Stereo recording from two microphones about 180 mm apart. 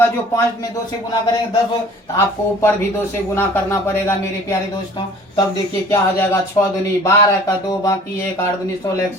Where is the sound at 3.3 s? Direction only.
15° left (ahead or behind).